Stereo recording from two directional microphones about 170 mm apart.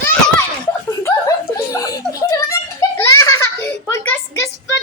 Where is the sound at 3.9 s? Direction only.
15° left (ahead or behind).